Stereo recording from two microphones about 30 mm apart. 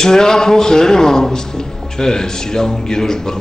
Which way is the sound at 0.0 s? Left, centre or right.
Centre.